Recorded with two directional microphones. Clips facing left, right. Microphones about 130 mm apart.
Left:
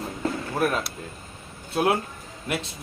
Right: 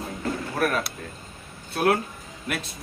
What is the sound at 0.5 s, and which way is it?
Speech, 20° left (ahead or behind).